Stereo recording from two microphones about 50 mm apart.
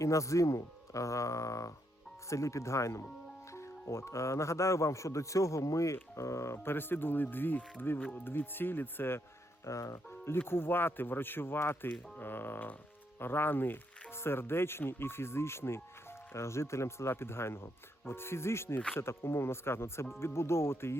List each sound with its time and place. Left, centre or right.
0.0 s speech: left
3.5 s speech: left
6.6 s speech: left
9.6 s speech: left
10.1 s speech: left